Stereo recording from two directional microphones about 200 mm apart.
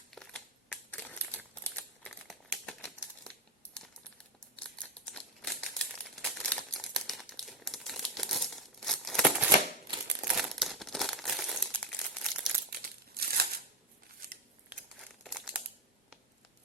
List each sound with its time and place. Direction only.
0.1 s crumpling: 5° left (ahead or behind)
3.8 s computer keyboard: 5° left (ahead or behind)
4.5 s crumpling: 5° left (ahead or behind)
12.8 s crumpling: 50° right (ahead or behind)
15.2 s crumpling: 5° right (ahead or behind)